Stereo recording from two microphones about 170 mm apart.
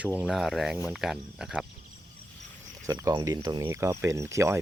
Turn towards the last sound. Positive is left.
turn(degrees=-15)  # may be behind; listen again after turning